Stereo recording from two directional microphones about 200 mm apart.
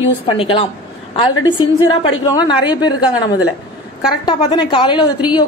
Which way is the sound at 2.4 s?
20° left (ahead or behind).